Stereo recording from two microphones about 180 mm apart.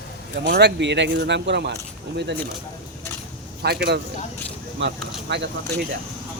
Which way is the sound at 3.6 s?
65° right (ahead or behind).